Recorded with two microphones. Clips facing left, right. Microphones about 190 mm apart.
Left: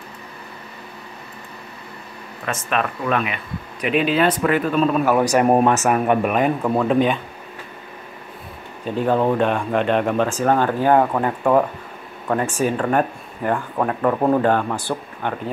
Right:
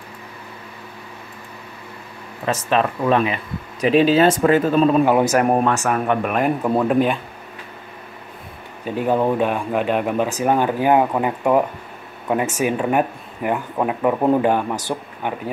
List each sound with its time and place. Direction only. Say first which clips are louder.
2.4 s speech: right 4 dB; 30° right (ahead or behind)
5.3 s speech: left 2 dB; 5° left (ahead or behind)
6.3 s speech: even; 5° right (ahead or behind)
8.8 s speech: even; 10° right (ahead or behind)